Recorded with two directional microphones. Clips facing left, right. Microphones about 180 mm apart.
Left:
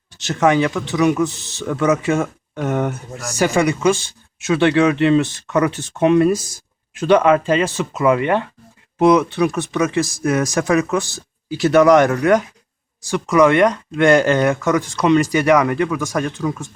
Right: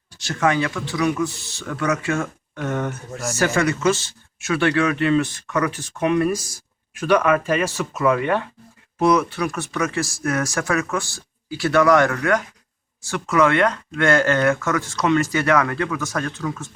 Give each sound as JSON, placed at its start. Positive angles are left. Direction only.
{"t": 0.1, "sound": "speech", "side_deg": 20}